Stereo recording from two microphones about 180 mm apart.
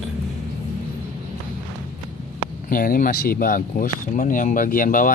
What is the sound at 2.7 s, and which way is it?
Speech, 50° left (ahead or behind).